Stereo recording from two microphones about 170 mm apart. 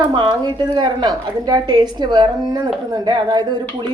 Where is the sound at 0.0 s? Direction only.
25° right (ahead or behind).